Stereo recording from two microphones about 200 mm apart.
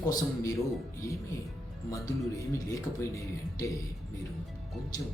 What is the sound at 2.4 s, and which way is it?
Speech, 15° left (ahead or behind).